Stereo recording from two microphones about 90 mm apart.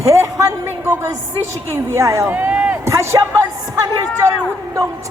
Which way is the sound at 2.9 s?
30° right (ahead or behind).